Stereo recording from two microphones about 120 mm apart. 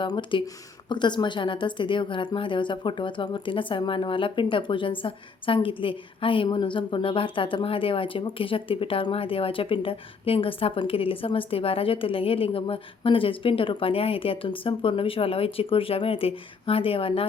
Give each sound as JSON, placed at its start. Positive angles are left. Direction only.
{"t": 0.0, "sound": "a woman's voice", "side_deg": 40}